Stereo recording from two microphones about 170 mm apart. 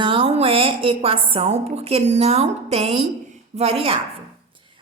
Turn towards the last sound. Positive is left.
turn(degrees=-35)  # may be behind; listen again after turning